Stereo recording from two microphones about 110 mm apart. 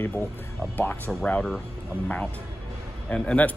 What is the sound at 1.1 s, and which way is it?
Speech, 5° left (ahead or behind).